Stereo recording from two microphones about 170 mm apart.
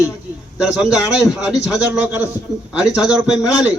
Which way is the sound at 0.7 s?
5° right (ahead or behind).